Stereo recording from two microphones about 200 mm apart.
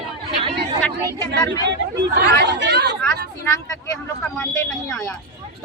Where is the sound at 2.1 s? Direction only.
55° right (ahead or behind).